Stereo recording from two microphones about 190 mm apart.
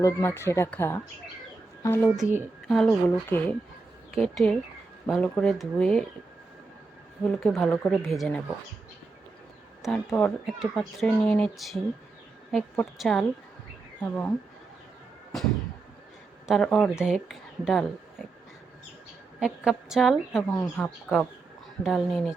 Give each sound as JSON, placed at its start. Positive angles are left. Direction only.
{"t": 0.0, "sound": "speech", "side_deg": 15}
{"t": 2.0, "sound": "a woman's voice", "side_deg": -5}
{"t": 7.3, "sound": "a woman's voice", "side_deg": 0}
{"t": 9.8, "sound": "a woman's voice", "side_deg": 0}
{"t": 16.5, "sound": "speech", "side_deg": 0}
{"t": 19.4, "sound": "a woman's voice", "side_deg": 0}